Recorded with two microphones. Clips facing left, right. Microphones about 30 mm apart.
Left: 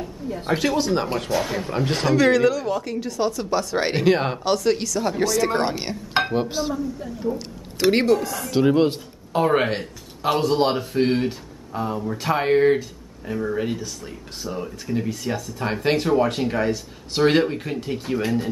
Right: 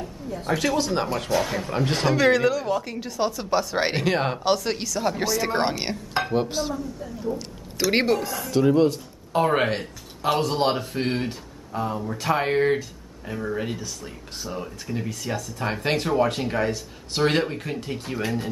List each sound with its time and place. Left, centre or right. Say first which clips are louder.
0.6 s speech: left 2 dB; centre
4.0 s speech: left 3 dB; centre
6.3 s a woman's voice: left 1 dB; centre
7.9 s speech: left 2 dB; centre
8.5 s speech: left 1 dB; left
9.3 s speech: left 2 dB; centre